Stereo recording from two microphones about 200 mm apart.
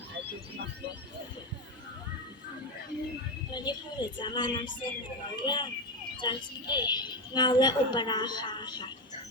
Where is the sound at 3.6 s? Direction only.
20° left (ahead or behind).